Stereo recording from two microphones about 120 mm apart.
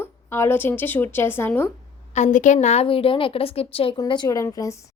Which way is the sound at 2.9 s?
50° left (ahead or behind).